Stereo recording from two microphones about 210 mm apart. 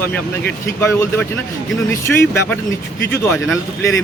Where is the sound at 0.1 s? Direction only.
10° left (ahead or behind).